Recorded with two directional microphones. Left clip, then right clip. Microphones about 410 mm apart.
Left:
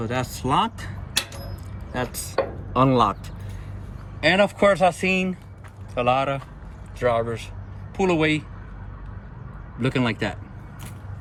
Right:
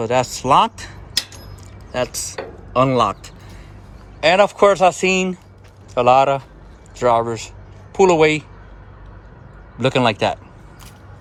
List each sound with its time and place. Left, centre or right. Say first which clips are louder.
0.0 s speech: right 9 dB; centre
9.7 s speech: right 8 dB; centre